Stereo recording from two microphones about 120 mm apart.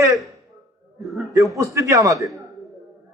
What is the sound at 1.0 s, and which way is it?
Speech, centre (ahead or behind).